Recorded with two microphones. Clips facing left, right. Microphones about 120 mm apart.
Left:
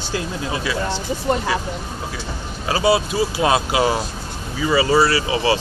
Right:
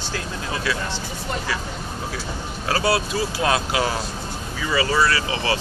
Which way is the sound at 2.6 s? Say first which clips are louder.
Left 4 dB; 10° left (ahead or behind).